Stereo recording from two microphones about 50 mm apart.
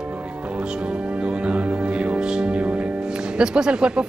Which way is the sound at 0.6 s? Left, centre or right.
Right.